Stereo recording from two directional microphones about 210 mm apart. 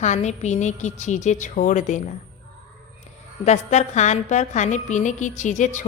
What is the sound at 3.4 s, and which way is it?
A woman's voice, 35° left (ahead or behind).